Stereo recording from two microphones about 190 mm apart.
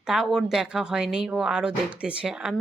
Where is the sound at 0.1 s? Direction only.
Centre (ahead or behind).